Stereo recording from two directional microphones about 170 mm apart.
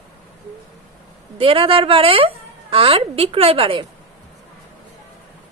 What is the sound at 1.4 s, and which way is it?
A woman's voice, 30° right (ahead or behind).